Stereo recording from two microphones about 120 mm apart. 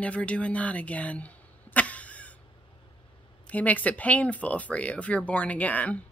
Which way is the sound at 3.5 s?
10° left (ahead or behind).